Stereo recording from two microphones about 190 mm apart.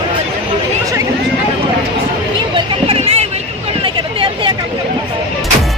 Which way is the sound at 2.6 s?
30° right (ahead or behind).